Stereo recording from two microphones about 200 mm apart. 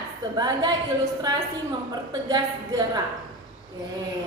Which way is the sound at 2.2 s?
20° right (ahead or behind).